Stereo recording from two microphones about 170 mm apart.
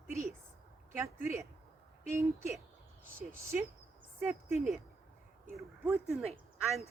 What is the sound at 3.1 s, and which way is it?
Speech, 15° right (ahead or behind).